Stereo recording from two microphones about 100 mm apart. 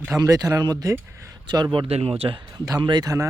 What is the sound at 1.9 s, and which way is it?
Speech, 80° right.